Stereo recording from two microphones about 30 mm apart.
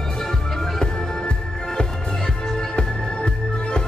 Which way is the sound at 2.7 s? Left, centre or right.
Left.